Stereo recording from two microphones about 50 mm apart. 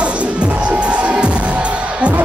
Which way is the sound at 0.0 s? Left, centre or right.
Right.